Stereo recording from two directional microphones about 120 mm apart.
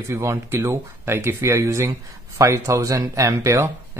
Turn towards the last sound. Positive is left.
turn(degrees=-25)  # may be behind; listen again after turning